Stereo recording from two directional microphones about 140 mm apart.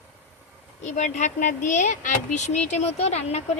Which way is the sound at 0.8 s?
60° left (ahead or behind).